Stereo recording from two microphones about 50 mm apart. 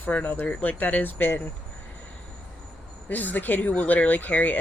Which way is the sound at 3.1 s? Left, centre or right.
Left.